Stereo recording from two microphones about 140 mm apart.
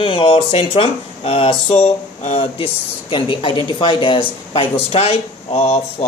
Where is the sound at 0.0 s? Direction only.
40° left (ahead or behind).